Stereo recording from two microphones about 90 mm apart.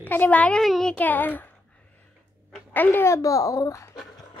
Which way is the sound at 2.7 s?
20° left (ahead or behind).